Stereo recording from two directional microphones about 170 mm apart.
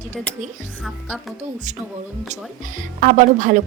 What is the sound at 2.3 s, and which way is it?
Speech, 50° right (ahead or behind).